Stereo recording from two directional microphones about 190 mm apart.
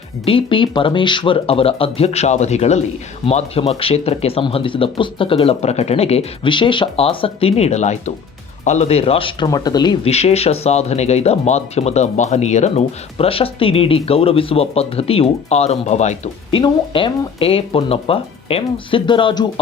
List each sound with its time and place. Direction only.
0.3 s speech: 25° left (ahead or behind)